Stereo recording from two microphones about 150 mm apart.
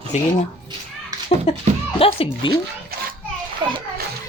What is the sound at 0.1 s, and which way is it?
Speech, 50° left (ahead or behind).